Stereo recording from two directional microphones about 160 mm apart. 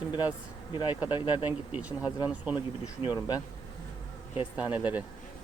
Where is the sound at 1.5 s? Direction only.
10° right (ahead or behind).